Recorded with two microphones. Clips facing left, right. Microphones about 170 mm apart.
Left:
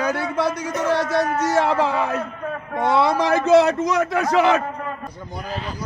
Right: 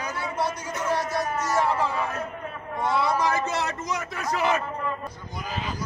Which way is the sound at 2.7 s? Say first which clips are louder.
Left 6 dB; 75° left (ahead or behind).